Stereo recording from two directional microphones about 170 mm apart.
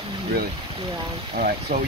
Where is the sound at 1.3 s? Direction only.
55° right (ahead or behind).